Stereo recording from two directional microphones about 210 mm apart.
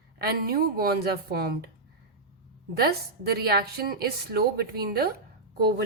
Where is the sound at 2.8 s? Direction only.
50° right (ahead or behind).